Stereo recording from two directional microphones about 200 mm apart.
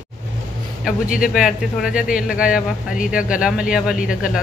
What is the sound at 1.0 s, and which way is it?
Speech, 45° left (ahead or behind).